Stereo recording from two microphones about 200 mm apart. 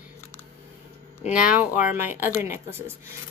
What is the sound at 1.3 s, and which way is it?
A woman's voice, 5° right (ahead or behind).